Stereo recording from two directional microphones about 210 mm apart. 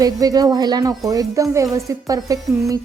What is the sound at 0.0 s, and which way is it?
Speech, 15° right (ahead or behind).